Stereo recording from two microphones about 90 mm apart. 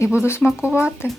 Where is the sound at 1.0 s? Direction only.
25° left (ahead or behind).